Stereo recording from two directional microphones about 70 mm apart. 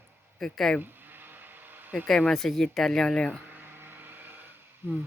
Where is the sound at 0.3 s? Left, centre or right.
Centre.